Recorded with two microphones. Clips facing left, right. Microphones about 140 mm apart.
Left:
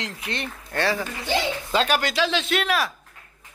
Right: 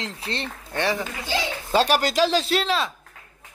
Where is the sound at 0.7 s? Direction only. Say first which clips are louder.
Even; 20° right (ahead or behind).